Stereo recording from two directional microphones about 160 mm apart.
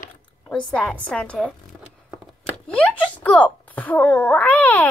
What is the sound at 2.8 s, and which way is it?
Speech, 10° left (ahead or behind).